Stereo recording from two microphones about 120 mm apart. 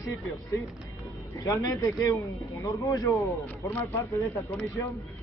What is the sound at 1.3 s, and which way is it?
Speech, 25° left (ahead or behind).